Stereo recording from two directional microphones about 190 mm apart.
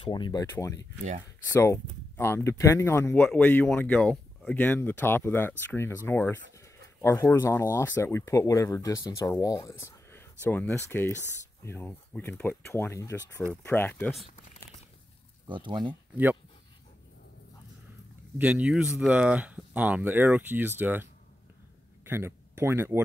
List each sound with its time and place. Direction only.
0.0 s speech: 25° left (ahead or behind)
15.4 s speech: 25° right (ahead or behind)
15.9 s speech: 10° right (ahead or behind)
18.4 s speech: 5° right (ahead or behind)